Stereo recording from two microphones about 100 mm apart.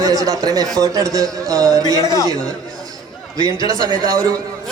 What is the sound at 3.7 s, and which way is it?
Speech, 35° right (ahead or behind).